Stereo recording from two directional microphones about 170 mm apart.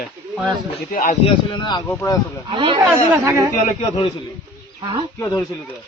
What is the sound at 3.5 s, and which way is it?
Speech, 45° left (ahead or behind).